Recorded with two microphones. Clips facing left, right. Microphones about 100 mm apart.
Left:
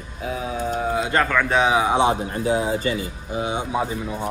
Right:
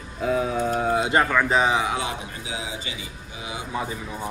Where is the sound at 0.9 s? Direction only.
25° right (ahead or behind).